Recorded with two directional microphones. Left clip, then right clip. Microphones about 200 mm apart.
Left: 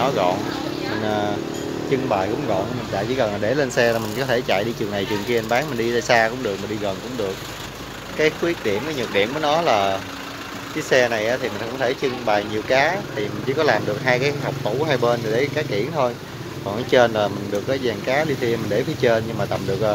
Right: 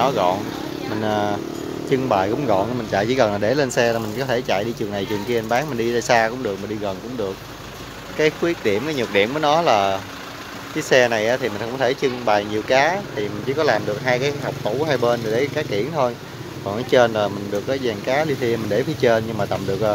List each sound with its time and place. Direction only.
0.0 s speech: 15° right (ahead or behind)
3.0 s speech: 30° right (ahead or behind)
3.3 s speech: 15° right (ahead or behind)
8.2 s speech: 15° right (ahead or behind)